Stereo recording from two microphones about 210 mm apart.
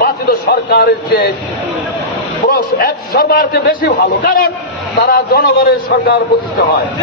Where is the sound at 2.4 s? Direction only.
45° left (ahead or behind).